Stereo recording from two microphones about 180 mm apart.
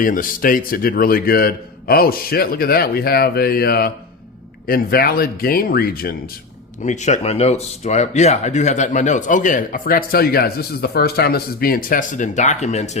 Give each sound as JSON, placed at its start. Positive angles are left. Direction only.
{"t": 0.0, "sound": "a man's voice", "side_deg": 50}
{"t": 6.8, "sound": "speech", "side_deg": 40}